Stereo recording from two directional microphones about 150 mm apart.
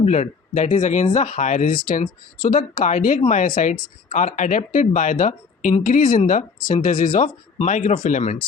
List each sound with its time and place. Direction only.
0.0 s speech: 55° left (ahead or behind)